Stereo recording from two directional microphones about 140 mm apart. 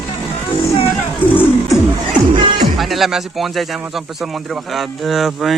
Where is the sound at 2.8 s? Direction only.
Centre (ahead or behind).